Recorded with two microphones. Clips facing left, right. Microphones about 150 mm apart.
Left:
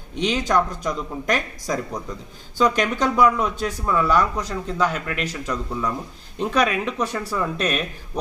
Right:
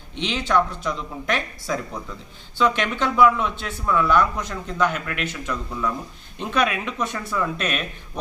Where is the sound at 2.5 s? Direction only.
40° left (ahead or behind).